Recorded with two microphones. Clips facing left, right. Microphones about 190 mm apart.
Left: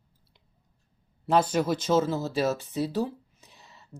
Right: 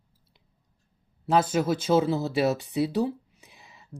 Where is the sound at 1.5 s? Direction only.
5° right (ahead or behind).